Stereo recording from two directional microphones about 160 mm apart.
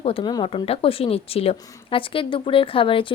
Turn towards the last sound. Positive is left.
turn(degrees=35)  # may be behind; listen again after turning